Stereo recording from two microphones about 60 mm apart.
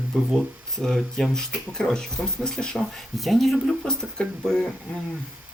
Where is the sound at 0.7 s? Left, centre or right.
Centre.